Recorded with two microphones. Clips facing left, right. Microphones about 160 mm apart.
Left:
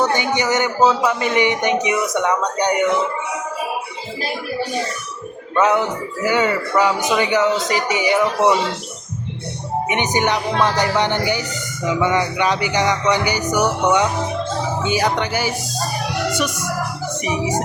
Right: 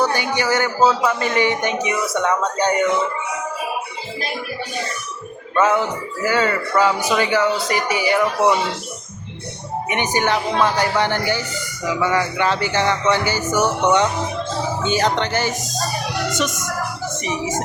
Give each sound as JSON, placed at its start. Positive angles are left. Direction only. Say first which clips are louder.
{"t": 0.0, "sound": "speech", "louder": "left 1 dB", "side_deg": 20}
{"t": 5.5, "sound": "speech", "louder": "left 1 dB", "side_deg": 20}
{"t": 9.9, "sound": "speech", "louder": "even", "side_deg": 20}